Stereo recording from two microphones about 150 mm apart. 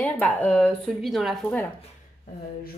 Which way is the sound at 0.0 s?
10° left (ahead or behind).